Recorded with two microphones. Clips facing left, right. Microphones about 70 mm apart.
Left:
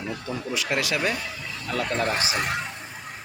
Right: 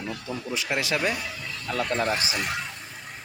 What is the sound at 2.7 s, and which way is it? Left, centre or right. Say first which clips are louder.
Vehicle: left 3 dB; left.